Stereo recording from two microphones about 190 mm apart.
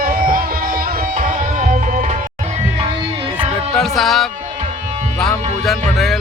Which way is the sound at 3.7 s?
Centre (ahead or behind).